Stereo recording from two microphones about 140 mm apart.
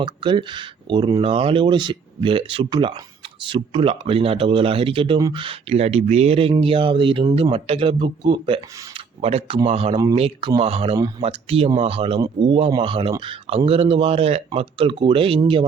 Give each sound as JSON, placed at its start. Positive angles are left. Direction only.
{"t": 0.0, "sound": "speech", "side_deg": -35}